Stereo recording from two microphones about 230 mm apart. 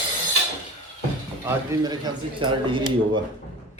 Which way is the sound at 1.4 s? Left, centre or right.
Centre.